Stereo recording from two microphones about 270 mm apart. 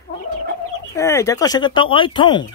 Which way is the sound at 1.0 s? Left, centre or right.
Centre.